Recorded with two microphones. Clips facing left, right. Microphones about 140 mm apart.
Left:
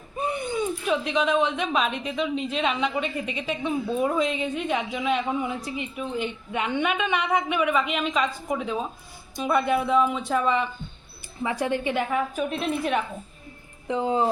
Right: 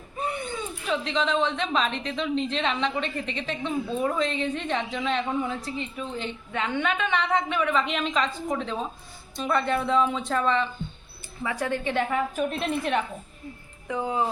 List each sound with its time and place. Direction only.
0.2 s speech: 15° left (ahead or behind)
12.1 s a woman's voice: centre (ahead or behind)
13.8 s speech: 25° left (ahead or behind)